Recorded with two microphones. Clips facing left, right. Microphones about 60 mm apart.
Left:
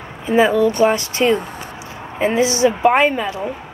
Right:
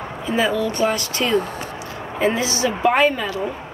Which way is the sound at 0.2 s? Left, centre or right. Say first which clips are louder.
Left 6 dB; left.